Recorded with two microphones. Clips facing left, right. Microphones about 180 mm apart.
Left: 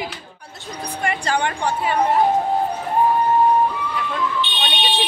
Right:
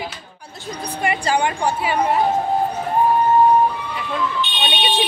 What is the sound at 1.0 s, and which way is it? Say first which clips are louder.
Speech: right 2 dB; 10° right (ahead or behind).